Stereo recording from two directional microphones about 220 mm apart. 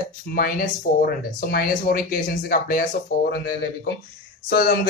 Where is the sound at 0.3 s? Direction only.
45° left (ahead or behind).